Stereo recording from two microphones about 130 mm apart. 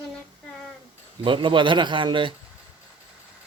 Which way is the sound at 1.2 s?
40° right (ahead or behind).